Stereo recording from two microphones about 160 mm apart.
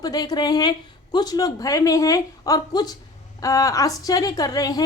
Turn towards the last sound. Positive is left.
turn(degrees=25)  # may be behind; listen again after turning